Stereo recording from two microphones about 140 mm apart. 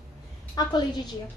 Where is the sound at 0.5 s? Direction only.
30° left (ahead or behind).